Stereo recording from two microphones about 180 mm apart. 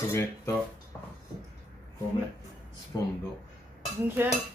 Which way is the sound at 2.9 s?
20° left (ahead or behind).